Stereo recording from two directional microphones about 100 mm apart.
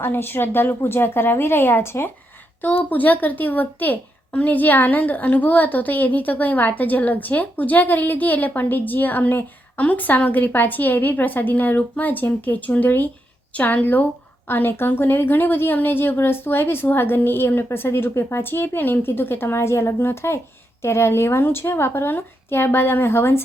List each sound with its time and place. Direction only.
0.0 s a woman's voice: 20° left (ahead or behind)